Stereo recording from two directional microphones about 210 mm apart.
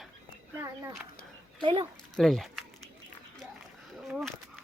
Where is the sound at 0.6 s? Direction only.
10° right (ahead or behind).